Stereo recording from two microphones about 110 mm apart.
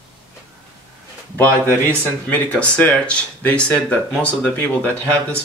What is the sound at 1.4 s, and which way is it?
Speech, 15° left (ahead or behind).